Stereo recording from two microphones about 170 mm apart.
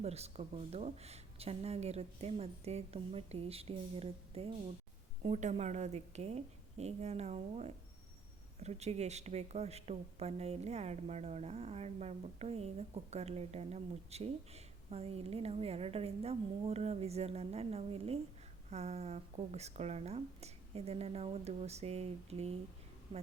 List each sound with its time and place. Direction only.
0.0 s speech: 40° right (ahead or behind)